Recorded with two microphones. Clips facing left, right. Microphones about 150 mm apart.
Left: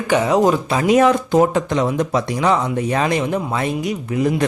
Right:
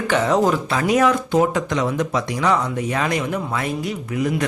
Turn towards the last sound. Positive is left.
turn(degrees=30)  # may be behind; listen again after turning